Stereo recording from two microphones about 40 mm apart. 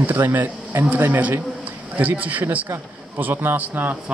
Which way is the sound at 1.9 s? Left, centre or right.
Right.